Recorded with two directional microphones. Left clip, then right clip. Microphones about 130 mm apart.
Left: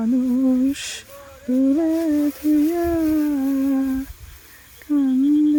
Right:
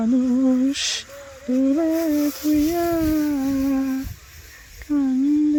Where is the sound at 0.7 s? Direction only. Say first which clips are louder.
Right 3 dB; 15° left (ahead or behind).